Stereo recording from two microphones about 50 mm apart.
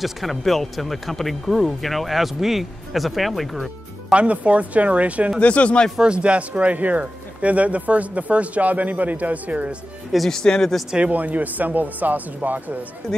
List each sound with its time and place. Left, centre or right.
0.0 s speech: centre
4.1 s speech: right
5.4 s speech: left
5.9 s speech: right
10.3 s speech: centre
11.1 s speech: right